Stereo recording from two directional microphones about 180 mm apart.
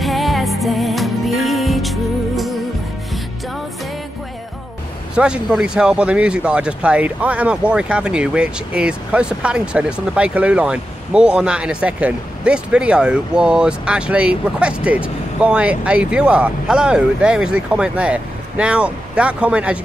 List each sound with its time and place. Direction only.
0.0 s music: centre (ahead or behind)
5.1 s speech: 5° right (ahead or behind)